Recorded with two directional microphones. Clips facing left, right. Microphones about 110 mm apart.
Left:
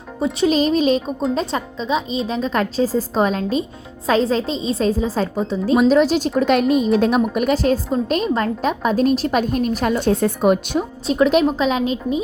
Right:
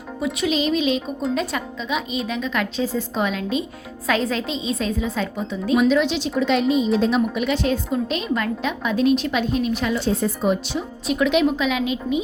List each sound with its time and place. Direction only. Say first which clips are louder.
0.3 s a woman's voice: left 5 dB; 40° left (ahead or behind); by 10.8 s 55° left (ahead or behind)
11.0 s a woman's voice: left 3 dB; 35° left (ahead or behind)